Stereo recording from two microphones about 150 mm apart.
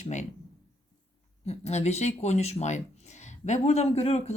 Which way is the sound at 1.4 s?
45° left (ahead or behind).